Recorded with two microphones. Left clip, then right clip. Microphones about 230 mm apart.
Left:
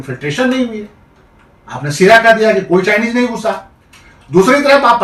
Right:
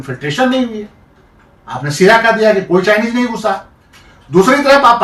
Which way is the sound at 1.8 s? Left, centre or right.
Centre.